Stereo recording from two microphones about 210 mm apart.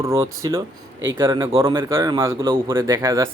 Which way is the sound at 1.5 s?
25° right (ahead or behind).